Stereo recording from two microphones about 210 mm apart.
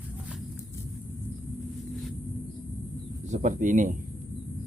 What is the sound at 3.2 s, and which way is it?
Speech, 35° right (ahead or behind).